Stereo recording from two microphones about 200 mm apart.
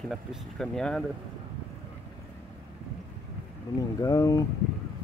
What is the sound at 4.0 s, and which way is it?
Speech, 15° left (ahead or behind).